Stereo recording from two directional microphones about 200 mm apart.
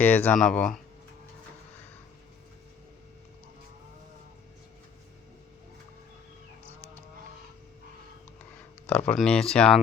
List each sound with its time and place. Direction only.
0.0 s speech: 10° left (ahead or behind)
8.9 s speech: 5° left (ahead or behind)